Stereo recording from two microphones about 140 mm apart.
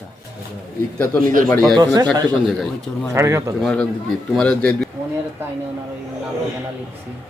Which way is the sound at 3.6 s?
5° left (ahead or behind).